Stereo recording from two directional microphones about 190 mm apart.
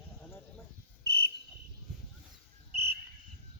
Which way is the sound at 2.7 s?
35° right (ahead or behind).